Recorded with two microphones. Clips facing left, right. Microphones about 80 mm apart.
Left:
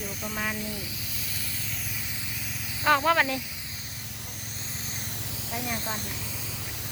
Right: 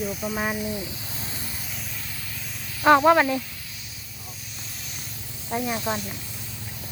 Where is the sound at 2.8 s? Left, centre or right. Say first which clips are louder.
Right 6 dB; right.